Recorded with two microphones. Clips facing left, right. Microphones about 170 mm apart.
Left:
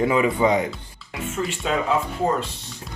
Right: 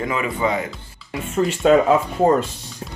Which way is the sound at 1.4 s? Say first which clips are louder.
Right 10 dB; 50° right (ahead or behind).